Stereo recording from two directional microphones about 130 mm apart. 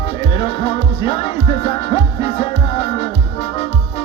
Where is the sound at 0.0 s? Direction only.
45° left (ahead or behind).